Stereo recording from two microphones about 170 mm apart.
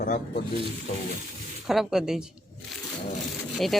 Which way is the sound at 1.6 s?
Centre (ahead or behind).